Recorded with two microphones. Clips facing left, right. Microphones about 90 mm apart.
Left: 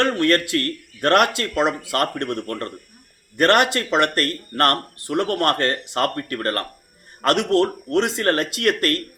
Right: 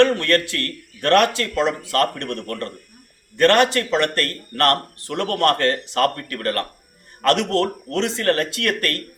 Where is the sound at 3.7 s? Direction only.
30° left (ahead or behind).